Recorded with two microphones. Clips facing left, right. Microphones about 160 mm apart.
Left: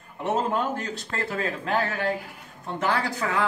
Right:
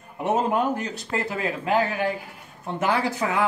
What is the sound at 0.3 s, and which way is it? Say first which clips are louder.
Speech: right 3 dB; 15° right (ahead or behind).